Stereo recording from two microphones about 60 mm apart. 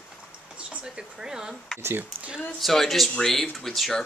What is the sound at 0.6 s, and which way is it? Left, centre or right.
Speech, centre.